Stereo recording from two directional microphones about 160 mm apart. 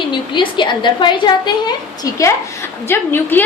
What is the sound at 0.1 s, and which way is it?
A woman's voice, 30° left (ahead or behind).